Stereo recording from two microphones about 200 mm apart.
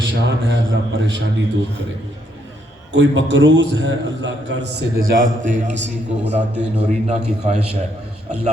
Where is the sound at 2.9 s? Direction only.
65° right (ahead or behind); by 5.9 s 35° right (ahead or behind).